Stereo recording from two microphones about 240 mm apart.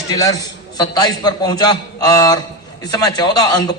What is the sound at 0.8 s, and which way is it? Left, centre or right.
A man's voice, centre.